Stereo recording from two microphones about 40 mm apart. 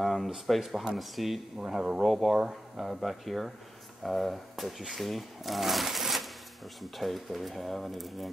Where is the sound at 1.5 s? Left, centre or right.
Centre.